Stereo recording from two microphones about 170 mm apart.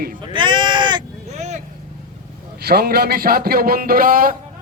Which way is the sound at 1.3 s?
40° right (ahead or behind).